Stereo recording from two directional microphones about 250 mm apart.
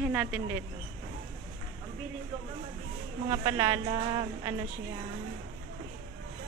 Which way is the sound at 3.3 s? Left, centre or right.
Centre.